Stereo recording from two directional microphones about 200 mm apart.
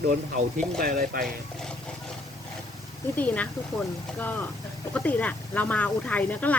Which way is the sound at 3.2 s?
5° left (ahead or behind).